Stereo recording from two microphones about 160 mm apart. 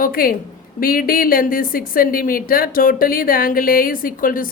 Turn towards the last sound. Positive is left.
turn(degrees=60)  # may be behind; listen again after turning